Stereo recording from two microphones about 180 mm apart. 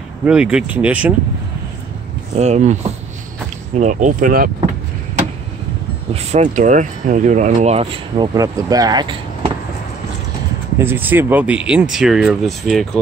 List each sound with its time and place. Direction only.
0.2 s speech: 5° right (ahead or behind)
2.3 s speech: 40° right (ahead or behind)
6.1 s speech: 40° right (ahead or behind)
8.4 s speech: 20° right (ahead or behind)
10.8 s speech: 10° right (ahead or behind)